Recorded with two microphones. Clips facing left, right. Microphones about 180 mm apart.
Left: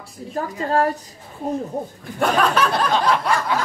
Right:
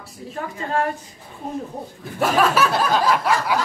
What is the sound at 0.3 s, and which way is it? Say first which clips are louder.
Speech: left 4 dB; 40° left (ahead or behind).